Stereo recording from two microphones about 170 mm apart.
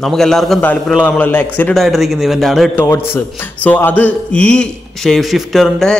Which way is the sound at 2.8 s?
15° left (ahead or behind).